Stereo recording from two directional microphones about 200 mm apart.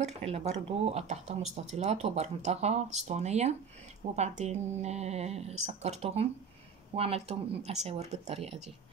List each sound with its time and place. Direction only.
0.0 s speech: 30° right (ahead or behind)